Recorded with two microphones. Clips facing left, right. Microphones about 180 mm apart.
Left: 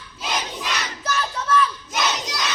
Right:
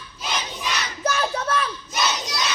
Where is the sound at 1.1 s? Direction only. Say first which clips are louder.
Even; 55° right (ahead or behind).